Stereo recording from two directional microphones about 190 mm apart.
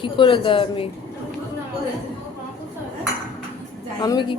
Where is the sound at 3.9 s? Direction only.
20° left (ahead or behind).